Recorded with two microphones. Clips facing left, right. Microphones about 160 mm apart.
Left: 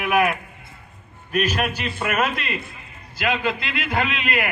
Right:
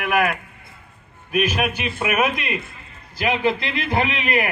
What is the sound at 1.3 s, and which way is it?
Speech, 10° right (ahead or behind).